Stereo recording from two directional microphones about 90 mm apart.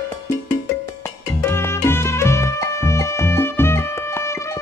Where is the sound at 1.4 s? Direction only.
30° left (ahead or behind).